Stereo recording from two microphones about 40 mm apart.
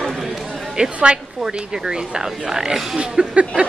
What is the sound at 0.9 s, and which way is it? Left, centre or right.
A woman's voice, right.